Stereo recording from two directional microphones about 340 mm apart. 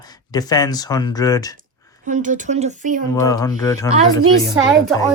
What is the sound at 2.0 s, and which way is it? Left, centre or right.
Speech, right.